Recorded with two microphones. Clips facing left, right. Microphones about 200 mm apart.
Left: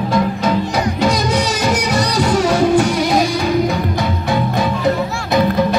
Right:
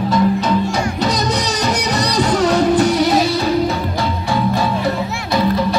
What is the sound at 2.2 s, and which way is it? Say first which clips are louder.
Music: even; 10° left (ahead or behind).